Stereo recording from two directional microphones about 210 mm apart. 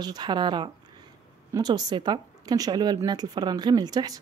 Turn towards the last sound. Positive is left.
turn(degrees=-20)  # may be behind; listen again after turning